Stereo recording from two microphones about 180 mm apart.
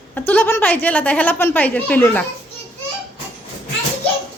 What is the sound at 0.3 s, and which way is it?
A woman's voice, 10° left (ahead or behind).